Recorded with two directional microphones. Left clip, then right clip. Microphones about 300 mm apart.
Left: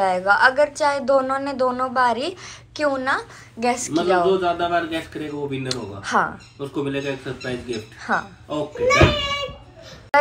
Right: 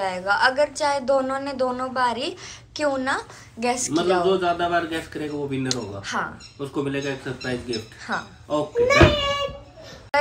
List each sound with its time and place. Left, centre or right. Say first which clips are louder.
0.0 s a woman's voice: left 4 dB; centre
8.8 s a child's voice: left 1 dB; right